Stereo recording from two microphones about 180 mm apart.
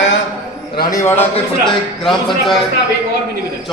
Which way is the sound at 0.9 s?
15° left (ahead or behind).